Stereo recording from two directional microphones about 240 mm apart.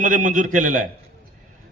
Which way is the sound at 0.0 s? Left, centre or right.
Right.